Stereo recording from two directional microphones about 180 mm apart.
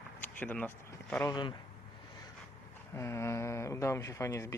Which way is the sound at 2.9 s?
15° left (ahead or behind).